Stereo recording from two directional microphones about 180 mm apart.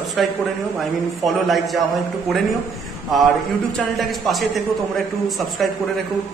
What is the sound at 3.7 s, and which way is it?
A man's voice, centre (ahead or behind).